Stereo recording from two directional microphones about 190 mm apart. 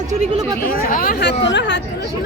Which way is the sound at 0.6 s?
50° left (ahead or behind).